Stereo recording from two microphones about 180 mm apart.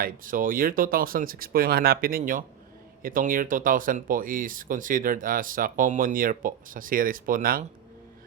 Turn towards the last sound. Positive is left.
turn(degrees=-55)  # may be behind; listen again after turning